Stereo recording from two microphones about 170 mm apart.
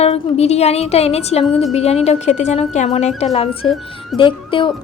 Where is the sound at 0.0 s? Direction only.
40° left (ahead or behind).